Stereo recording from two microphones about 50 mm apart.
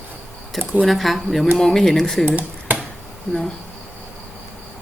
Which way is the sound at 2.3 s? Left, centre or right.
Right.